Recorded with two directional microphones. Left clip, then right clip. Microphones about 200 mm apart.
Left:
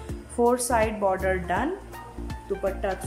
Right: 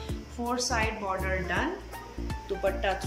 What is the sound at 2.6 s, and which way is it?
Speech, 20° left (ahead or behind).